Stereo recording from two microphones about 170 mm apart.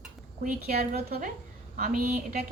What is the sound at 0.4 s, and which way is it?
Speech, 60° right (ahead or behind).